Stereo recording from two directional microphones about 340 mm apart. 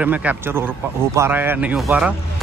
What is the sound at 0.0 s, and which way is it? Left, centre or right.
Speech, centre.